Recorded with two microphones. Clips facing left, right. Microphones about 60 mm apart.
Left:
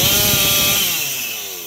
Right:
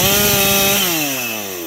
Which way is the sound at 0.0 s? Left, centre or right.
Right.